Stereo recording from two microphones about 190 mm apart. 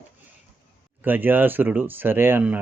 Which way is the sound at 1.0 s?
10° right (ahead or behind).